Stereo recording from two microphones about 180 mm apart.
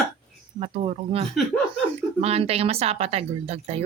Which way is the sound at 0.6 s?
35° right (ahead or behind).